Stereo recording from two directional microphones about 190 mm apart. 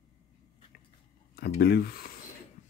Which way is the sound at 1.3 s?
60° left (ahead or behind).